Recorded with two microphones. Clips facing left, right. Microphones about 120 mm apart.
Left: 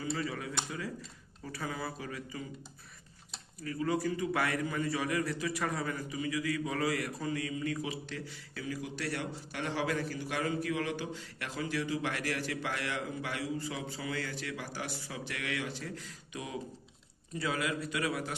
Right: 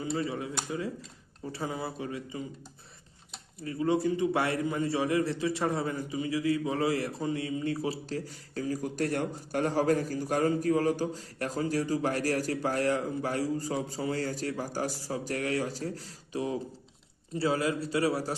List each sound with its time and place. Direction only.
0.0 s a man's voice: 25° right (ahead or behind)
1.5 s a man's voice: 25° right (ahead or behind)
3.6 s a man's voice: 25° right (ahead or behind)